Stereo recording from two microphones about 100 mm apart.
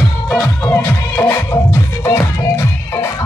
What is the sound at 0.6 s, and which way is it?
Music, 25° left (ahead or behind).